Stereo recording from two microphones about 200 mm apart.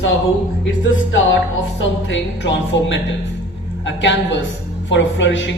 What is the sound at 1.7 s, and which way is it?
Speech, 65° left (ahead or behind).